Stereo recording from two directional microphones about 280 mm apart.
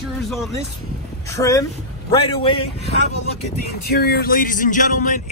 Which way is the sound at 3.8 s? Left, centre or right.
Left.